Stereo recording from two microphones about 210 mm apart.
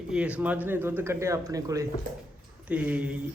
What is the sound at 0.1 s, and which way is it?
Speech, 5° right (ahead or behind).